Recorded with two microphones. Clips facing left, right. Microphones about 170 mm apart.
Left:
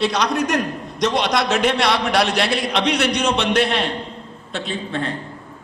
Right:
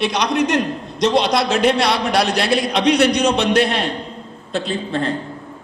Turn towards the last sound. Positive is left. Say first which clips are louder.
# right 3 dB
turn(degrees=-35)  # may be behind; listen again after turning